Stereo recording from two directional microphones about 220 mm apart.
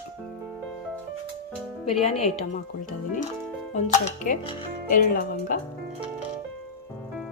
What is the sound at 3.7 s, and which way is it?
Speech, 30° left (ahead or behind).